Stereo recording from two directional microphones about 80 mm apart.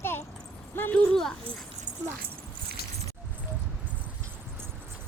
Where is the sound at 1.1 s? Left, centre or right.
Centre.